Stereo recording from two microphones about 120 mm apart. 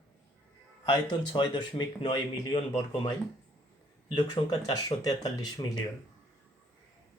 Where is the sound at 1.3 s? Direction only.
35° left (ahead or behind).